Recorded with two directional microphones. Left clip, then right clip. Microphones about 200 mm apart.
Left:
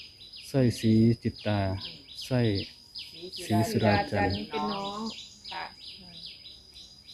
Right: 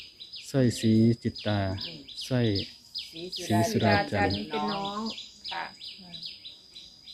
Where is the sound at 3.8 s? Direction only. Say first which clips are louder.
Even; 25° right (ahead or behind).